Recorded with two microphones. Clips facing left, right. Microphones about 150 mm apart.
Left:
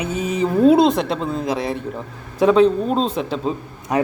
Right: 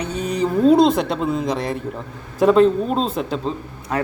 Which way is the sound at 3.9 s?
15° left (ahead or behind).